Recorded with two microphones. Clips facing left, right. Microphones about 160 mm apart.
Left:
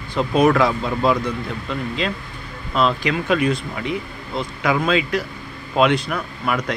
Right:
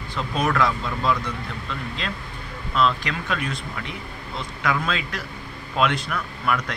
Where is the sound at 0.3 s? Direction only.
15° left (ahead or behind).